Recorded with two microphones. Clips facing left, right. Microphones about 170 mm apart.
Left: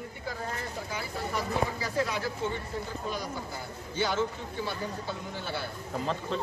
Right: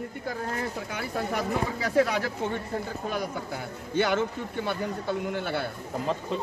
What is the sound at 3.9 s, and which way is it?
A man's voice, 60° right (ahead or behind).